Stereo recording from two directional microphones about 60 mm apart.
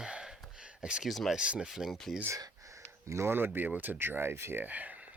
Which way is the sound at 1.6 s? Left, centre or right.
Centre.